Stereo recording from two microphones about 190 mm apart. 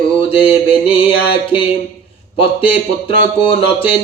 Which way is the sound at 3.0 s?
30° left (ahead or behind).